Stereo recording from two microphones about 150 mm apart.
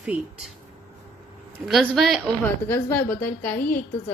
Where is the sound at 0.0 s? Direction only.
5° right (ahead or behind).